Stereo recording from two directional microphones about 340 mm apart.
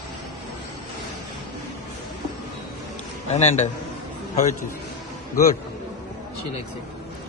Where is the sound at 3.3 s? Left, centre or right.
Centre.